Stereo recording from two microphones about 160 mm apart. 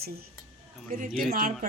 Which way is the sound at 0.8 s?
55° right (ahead or behind).